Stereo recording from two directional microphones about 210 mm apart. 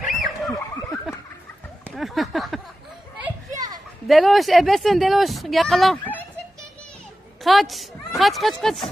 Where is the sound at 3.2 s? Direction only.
15° right (ahead or behind).